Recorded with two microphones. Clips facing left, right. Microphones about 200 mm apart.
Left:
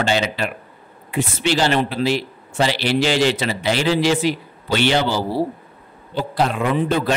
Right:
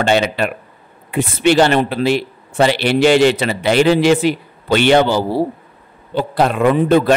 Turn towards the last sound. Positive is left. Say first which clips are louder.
# right 7 dB
turn(degrees=-55)  # may be behind; listen again after turning